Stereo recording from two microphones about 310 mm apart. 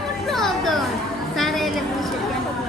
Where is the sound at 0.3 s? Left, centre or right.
Centre.